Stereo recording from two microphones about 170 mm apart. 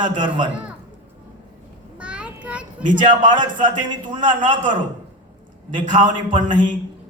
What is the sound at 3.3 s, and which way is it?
A man's voice, 30° right (ahead or behind).